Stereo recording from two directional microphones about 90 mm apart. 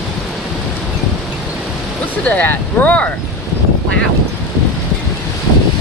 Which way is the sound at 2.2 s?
20° left (ahead or behind).